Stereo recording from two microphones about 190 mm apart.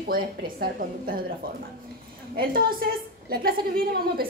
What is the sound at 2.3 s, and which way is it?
A woman's voice, 50° right (ahead or behind).